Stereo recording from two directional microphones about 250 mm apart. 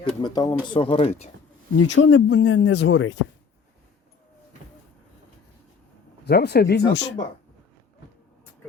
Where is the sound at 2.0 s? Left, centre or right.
Left.